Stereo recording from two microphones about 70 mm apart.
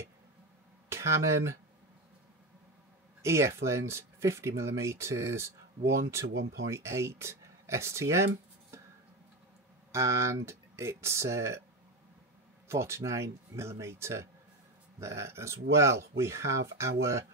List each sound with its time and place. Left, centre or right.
0.8 s speech: right
3.2 s speech: right
9.9 s speech: right
12.6 s speech: right